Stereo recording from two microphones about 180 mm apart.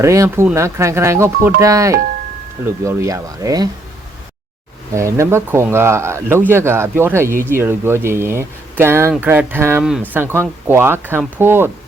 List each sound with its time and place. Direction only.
0.0 s speech: 15° right (ahead or behind)
4.9 s speech: 15° right (ahead or behind)